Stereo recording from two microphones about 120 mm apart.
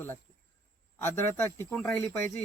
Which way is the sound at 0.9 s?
20° left (ahead or behind).